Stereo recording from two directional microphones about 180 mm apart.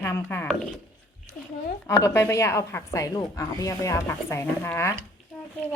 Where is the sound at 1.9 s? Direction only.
15° left (ahead or behind).